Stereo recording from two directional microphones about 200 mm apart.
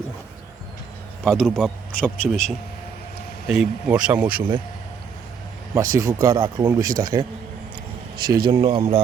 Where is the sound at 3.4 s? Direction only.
5° right (ahead or behind).